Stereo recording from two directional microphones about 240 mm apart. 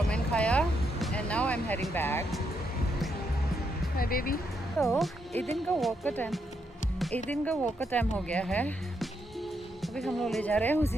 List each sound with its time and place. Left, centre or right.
0.1 s music: centre
3.9 s speech: left
4.8 s speech: centre
5.3 s speech: right
5.6 s speech: centre